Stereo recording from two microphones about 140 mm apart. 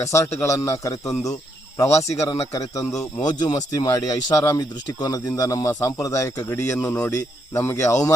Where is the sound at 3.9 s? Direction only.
25° left (ahead or behind).